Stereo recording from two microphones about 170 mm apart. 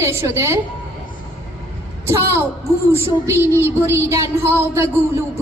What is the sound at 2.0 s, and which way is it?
A woman's voice, 15° right (ahead or behind).